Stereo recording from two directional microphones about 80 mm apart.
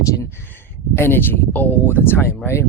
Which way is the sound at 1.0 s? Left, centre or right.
Left.